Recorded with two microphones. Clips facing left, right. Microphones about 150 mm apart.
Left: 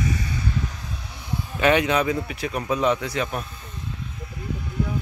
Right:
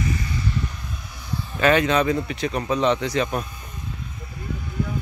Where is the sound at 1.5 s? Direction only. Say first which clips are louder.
Right 1 dB; 15° left (ahead or behind).